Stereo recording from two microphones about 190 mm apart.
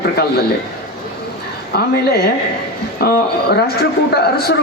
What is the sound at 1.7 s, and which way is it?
A man's voice, 55° left (ahead or behind).